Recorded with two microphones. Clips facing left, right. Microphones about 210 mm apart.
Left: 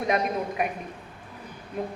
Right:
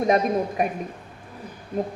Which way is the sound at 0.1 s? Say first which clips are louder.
Right 3 dB; 35° right (ahead or behind).